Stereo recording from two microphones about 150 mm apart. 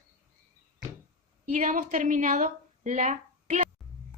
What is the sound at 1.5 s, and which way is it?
A woman's voice, 55° right (ahead or behind).